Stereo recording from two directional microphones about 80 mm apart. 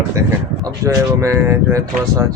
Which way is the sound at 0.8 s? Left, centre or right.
Right.